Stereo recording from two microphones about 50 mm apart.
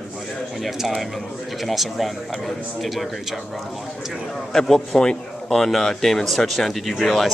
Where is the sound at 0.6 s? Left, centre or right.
Centre.